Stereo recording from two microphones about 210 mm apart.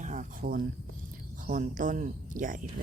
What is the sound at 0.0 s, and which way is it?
Speech, 35° right (ahead or behind).